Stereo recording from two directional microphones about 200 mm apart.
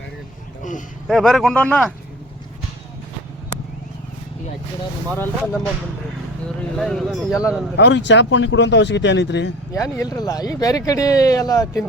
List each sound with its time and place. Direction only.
1.0 s speech: centre (ahead or behind)
5.1 s speech: 10° left (ahead or behind)
6.6 s speech: centre (ahead or behind)
7.8 s speech: 60° left (ahead or behind)
9.7 s speech: 15° left (ahead or behind)